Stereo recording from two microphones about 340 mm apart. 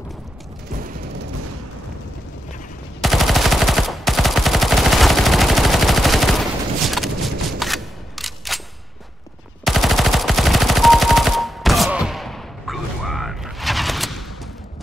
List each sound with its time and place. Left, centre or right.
3.0 s machine gun: centre
6.9 s single-lens reflex camera: centre
9.7 s machine gun: centre